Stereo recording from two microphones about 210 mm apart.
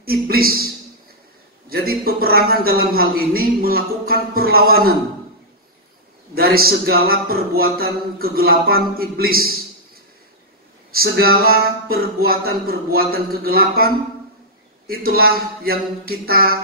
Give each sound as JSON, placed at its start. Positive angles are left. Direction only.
{"t": 0.0, "sound": "a man's voice", "side_deg": -45}
{"t": 1.7, "sound": "a man's voice", "side_deg": -45}
{"t": 6.3, "sound": "a man's voice", "side_deg": -45}
{"t": 10.9, "sound": "a man's voice", "side_deg": -45}
{"t": 14.9, "sound": "a man's voice", "side_deg": -45}